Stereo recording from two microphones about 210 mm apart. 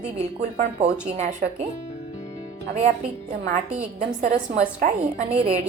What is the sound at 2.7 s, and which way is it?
Speech, 35° right (ahead or behind).